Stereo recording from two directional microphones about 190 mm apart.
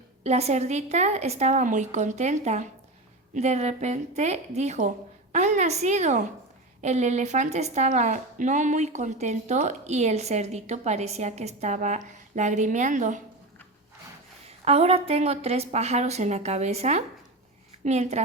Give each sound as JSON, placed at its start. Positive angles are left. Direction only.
{"t": 0.2, "sound": "a woman's voice", "side_deg": -35}
{"t": 14.6, "sound": "a woman's voice", "side_deg": -30}